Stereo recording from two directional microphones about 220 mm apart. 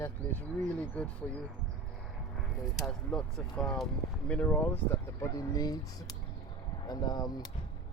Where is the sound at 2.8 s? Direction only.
5° left (ahead or behind).